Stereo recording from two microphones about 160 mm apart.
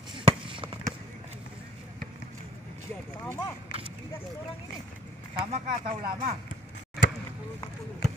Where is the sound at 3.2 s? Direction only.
20° left (ahead or behind).